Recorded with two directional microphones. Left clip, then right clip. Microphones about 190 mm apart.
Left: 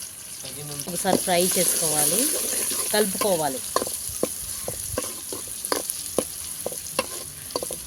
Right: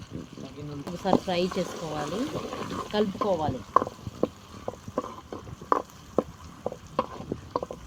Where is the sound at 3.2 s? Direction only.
45° left (ahead or behind).